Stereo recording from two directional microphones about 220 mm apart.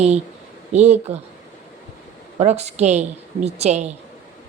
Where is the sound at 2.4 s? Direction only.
30° right (ahead or behind).